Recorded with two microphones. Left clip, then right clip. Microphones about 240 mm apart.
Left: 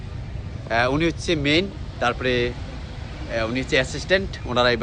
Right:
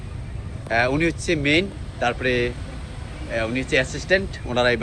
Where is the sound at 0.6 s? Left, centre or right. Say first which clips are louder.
Even; centre.